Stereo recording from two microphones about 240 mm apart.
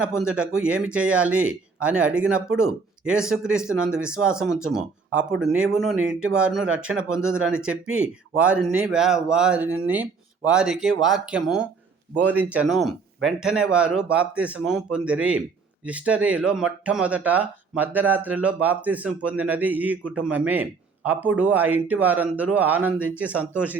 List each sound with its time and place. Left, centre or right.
0.2 s speech: centre
7.7 s speech: right
8.4 s speech: centre